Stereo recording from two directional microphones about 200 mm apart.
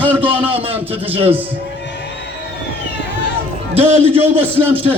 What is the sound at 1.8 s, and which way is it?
Crowd, 60° left (ahead or behind).